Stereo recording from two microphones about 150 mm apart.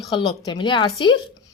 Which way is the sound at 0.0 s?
30° left (ahead or behind).